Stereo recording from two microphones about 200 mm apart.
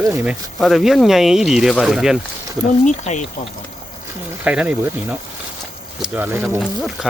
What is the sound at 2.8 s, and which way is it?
Speech, 35° left (ahead or behind).